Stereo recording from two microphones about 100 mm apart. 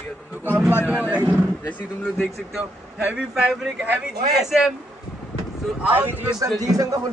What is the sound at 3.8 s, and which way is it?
Speech, 15° right (ahead or behind).